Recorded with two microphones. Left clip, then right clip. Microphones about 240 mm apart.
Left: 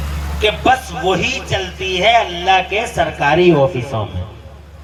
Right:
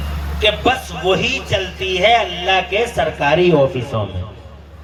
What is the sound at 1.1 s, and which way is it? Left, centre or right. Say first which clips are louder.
A man's voice: right 1 dB; centre.